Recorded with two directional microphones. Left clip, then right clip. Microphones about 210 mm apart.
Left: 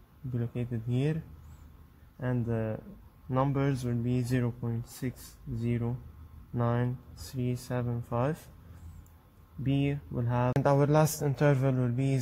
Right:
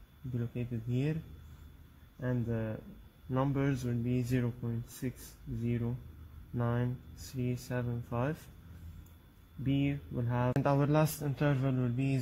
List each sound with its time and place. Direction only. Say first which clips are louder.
0.4 s speech: left 3 dB; 20° left (ahead or behind)
2.1 s speech: left 3 dB; 25° left (ahead or behind)
9.6 s speech: left 2 dB; 25° left (ahead or behind)